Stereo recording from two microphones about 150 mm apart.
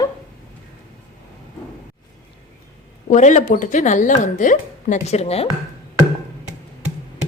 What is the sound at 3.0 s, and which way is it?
Speech, 55° left (ahead or behind).